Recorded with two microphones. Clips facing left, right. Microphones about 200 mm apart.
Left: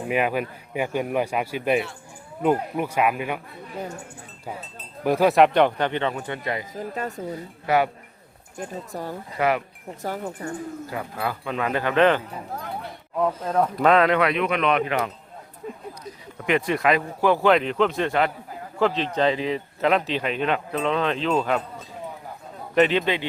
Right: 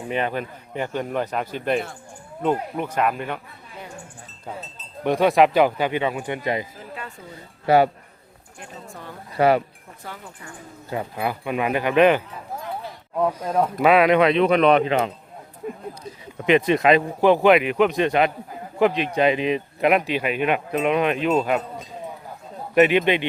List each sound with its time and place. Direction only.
0.1 s speech: 5° left (ahead or behind)
5.0 s speech: centre (ahead or behind); by 6.7 s 20° right (ahead or behind)
6.7 s speech: 40° left (ahead or behind)
7.7 s speech: 30° right (ahead or behind)
8.5 s speech: 40° left (ahead or behind)
9.4 s speech: 30° right (ahead or behind)
10.0 s speech: 40° left (ahead or behind)
10.8 s speech: 25° right (ahead or behind)
16.4 s speech: 20° right (ahead or behind)